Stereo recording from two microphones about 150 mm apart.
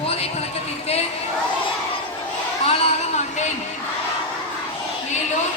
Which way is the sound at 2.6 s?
45° left (ahead or behind).